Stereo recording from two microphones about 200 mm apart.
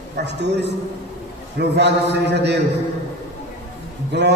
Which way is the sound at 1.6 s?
55° right (ahead or behind).